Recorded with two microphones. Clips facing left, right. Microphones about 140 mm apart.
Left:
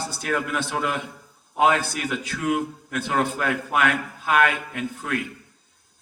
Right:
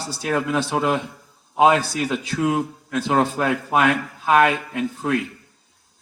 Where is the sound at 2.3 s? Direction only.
30° right (ahead or behind).